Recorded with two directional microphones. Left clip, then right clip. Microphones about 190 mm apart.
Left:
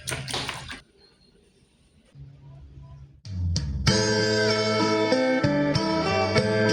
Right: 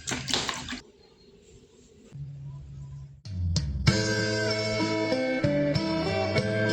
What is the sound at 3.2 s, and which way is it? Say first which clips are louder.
Music: left 1 dB; 40° left (ahead or behind).